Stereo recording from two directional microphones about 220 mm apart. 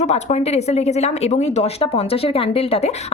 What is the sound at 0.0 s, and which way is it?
Speech, 30° left (ahead or behind).